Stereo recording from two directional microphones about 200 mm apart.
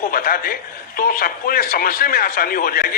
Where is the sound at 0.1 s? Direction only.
45° left (ahead or behind).